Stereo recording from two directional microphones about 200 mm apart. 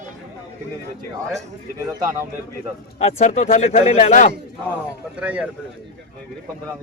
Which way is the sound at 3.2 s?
35° left (ahead or behind).